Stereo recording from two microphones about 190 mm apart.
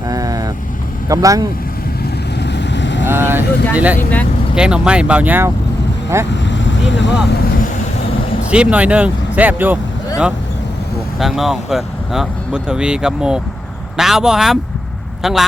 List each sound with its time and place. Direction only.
0.1 s vehicle: 20° right (ahead or behind)
1.0 s speech: 15° right (ahead or behind)
2.4 s vehicle: 65° left (ahead or behind)
3.1 s speech: 10° right (ahead or behind)
6.3 s vehicle: 70° left (ahead or behind)
8.4 s speech: 5° right (ahead or behind)
11.2 s speech: centre (ahead or behind)